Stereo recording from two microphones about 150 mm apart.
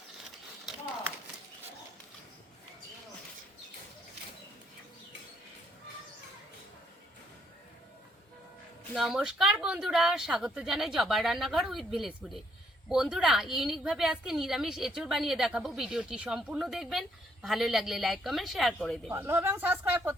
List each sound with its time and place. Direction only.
8.9 s a woman's voice: centre (ahead or behind)
19.1 s speech: 15° right (ahead or behind)